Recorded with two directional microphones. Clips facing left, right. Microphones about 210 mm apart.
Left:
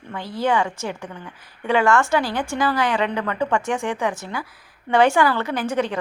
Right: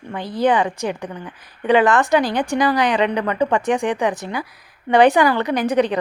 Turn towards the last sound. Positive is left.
turn(degrees=-15)  # may be behind; listen again after turning